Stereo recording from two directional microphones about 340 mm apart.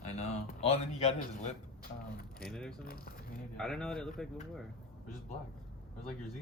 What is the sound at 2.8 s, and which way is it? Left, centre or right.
Speech, left.